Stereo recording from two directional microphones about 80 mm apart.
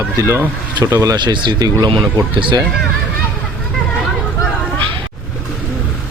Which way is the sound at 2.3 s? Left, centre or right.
Right.